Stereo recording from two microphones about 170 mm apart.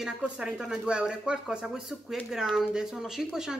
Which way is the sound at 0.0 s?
5° right (ahead or behind).